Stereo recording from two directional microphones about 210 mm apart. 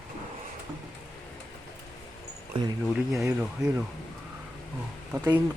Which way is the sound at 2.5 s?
25° right (ahead or behind).